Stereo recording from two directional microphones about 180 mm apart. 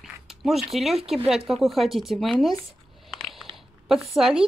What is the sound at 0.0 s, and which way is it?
Speech, centre (ahead or behind).